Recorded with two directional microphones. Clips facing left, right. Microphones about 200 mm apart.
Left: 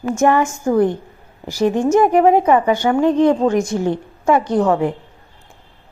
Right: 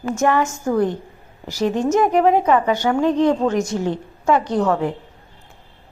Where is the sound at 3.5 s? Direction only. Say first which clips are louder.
Left 3 dB; 55° left (ahead or behind).